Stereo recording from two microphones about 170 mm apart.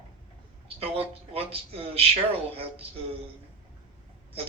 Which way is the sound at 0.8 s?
35° right (ahead or behind).